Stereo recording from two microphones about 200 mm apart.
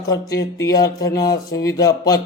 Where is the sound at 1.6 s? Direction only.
20° left (ahead or behind).